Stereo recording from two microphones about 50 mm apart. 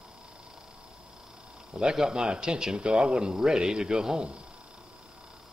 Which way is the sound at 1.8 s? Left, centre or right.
Centre.